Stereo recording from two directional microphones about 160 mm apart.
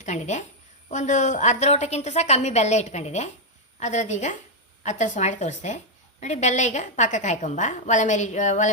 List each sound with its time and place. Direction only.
0.0 s a woman's voice: 45° left (ahead or behind)